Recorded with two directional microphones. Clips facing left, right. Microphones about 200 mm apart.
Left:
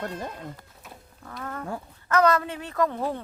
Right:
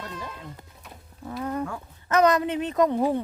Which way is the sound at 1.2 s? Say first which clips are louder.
Right 6 dB; 15° right (ahead or behind).